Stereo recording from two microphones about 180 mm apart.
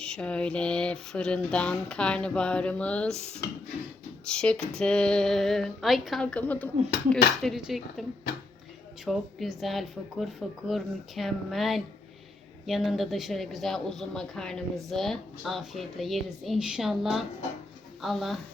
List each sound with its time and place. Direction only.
0.0 s a woman's voice: 5° left (ahead or behind)
4.3 s a woman's voice: 5° left (ahead or behind)
9.0 s a woman's voice: centre (ahead or behind)